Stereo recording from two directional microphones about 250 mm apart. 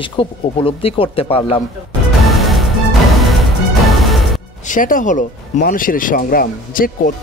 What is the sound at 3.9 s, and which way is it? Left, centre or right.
Music, centre.